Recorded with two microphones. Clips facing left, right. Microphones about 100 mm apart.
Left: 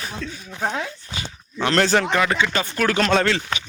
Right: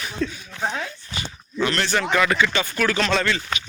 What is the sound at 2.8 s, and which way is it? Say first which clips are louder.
Speech: left 4 dB; 50° left (ahead or behind).